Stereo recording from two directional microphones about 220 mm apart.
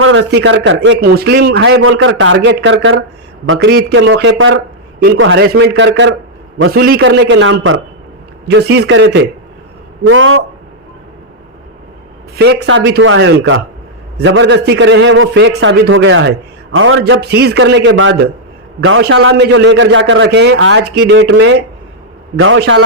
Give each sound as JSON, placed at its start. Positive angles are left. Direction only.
{"t": 0.0, "sound": "a man's voice", "side_deg": -60}
{"t": 1.8, "sound": "a man's voice", "side_deg": -65}
{"t": 3.7, "sound": "a man's voice", "side_deg": -50}
{"t": 8.4, "sound": "a man's voice", "side_deg": -50}
{"t": 12.4, "sound": "a man's voice", "side_deg": -50}